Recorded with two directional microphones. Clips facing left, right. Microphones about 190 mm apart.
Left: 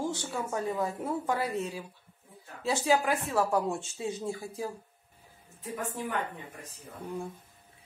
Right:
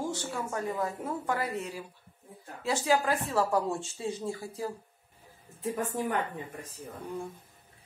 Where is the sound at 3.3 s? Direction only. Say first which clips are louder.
Even; centre (ahead or behind).